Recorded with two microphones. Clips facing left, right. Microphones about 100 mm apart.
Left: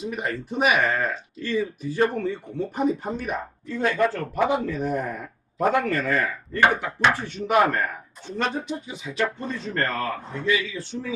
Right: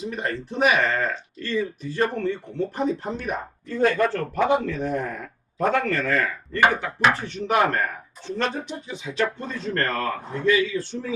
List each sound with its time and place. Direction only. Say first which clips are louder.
0.0 s speech: even; 5° left (ahead or behind)
10.3 s a man's voice: right 5 dB; 40° right (ahead or behind)